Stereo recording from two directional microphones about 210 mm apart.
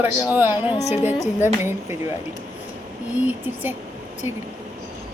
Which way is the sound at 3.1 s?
10° right (ahead or behind).